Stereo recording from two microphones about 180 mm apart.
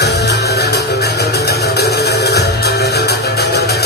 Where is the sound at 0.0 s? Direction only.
70° left (ahead or behind).